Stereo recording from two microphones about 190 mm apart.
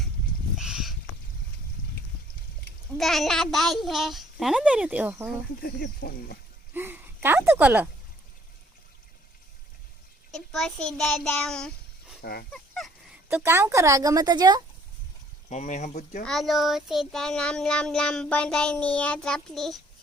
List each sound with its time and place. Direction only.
0.5 s a sound: centre (ahead or behind)
3.0 s speech: centre (ahead or behind)
5.5 s speech: 50° left (ahead or behind)
6.7 s speech: 10° right (ahead or behind)
10.3 s a child's voice: centre (ahead or behind)
12.2 s a sound: 55° left (ahead or behind)
12.8 s honk: centre (ahead or behind)
13.2 s speech: 10° right (ahead or behind)
15.4 s speech: 40° left (ahead or behind)
16.2 s speech: centre (ahead or behind)